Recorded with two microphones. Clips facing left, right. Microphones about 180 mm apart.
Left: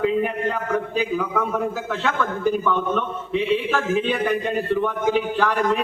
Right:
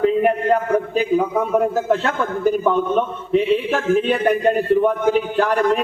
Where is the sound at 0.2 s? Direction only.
45° right (ahead or behind).